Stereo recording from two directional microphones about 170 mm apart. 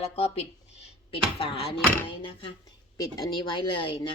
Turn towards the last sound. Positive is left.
turn(degrees=30)  # may be behind; listen again after turning